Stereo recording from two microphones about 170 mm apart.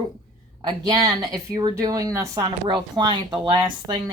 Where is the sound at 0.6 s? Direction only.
25° right (ahead or behind).